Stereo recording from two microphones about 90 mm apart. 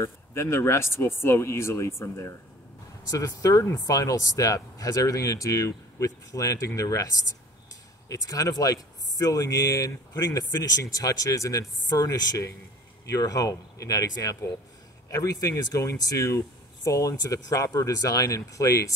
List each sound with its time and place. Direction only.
0.0 s speech: 30° left (ahead or behind)
3.1 s speech: 45° left (ahead or behind)
8.1 s speech: 40° left (ahead or behind)